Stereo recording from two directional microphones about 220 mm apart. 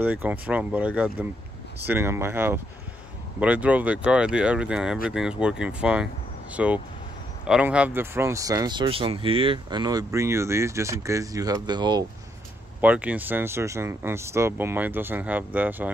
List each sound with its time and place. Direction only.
0.0 s speech: 5° right (ahead or behind)
12.8 s speech: 5° right (ahead or behind)